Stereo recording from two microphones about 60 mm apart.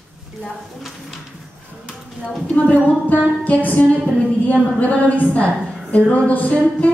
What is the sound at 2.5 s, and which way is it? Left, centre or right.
A woman's voice, left.